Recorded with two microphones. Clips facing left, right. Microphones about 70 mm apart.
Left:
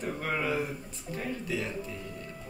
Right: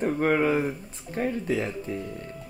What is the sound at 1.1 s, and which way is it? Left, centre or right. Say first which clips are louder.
Speech: right 7 dB; right.